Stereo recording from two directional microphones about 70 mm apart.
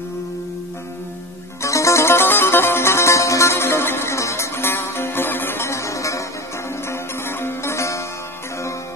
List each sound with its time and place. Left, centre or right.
1.6 s music: left
6.9 s music: left